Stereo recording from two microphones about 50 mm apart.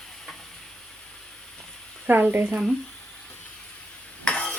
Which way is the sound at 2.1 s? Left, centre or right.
Right.